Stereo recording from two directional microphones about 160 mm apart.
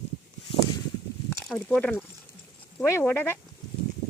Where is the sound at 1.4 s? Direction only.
5° left (ahead or behind).